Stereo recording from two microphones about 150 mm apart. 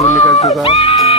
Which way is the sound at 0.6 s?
40° left (ahead or behind).